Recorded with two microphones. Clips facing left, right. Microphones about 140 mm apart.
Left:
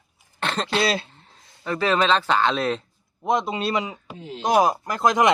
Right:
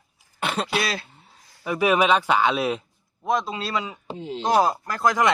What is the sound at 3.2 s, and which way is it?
Speech, 20° left (ahead or behind).